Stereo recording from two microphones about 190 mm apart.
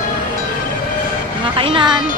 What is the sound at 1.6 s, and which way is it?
Speech, 25° right (ahead or behind).